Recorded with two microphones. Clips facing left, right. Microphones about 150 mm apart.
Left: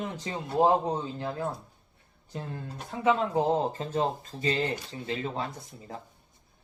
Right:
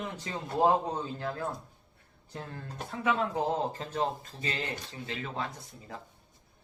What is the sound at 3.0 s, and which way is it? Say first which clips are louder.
Speech: left 5 dB; 25° left (ahead or behind).